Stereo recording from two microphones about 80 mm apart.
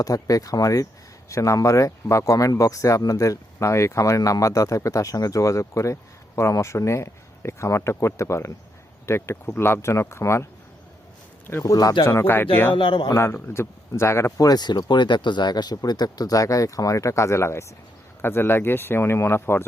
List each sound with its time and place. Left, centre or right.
0.0 s speech: left
11.6 s speech: left
12.0 s speech: left
12.7 s speech: left
13.1 s speech: left
14.3 s speech: left